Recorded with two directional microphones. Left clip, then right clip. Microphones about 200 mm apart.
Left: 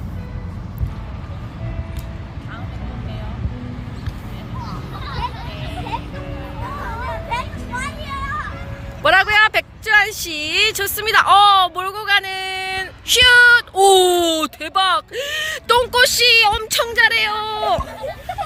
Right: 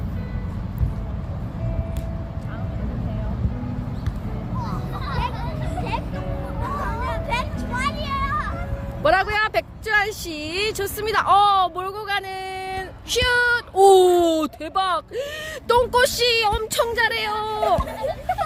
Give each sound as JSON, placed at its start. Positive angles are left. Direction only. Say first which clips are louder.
{"t": 7.1, "sound": "music", "louder": "left 1 dB", "side_deg": 50}
{"t": 9.0, "sound": "speech", "louder": "left 6 dB", "side_deg": 0}